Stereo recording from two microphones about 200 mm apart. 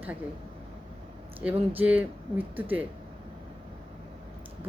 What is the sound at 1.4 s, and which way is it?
Speech, 5° right (ahead or behind).